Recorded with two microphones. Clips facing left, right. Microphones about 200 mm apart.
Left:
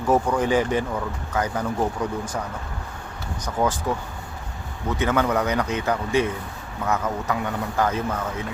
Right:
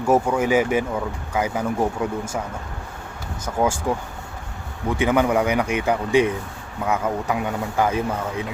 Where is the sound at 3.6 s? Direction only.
10° right (ahead or behind).